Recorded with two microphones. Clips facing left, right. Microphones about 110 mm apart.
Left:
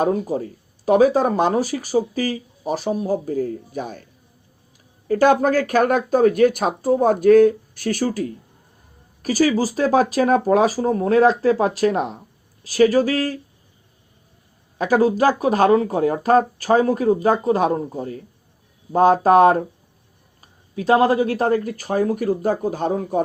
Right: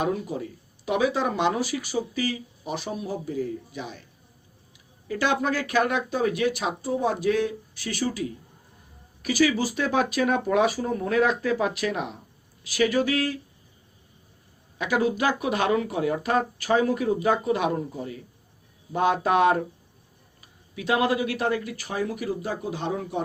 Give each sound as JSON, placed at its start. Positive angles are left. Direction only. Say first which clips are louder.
{"t": 0.0, "sound": "speech", "louder": "left 7 dB", "side_deg": 40}
{"t": 5.0, "sound": "speech", "louder": "left 9 dB", "side_deg": 45}
{"t": 14.8, "sound": "speech", "louder": "left 7 dB", "side_deg": 40}